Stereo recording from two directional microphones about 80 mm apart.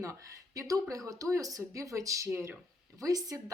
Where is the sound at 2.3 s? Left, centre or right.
Right.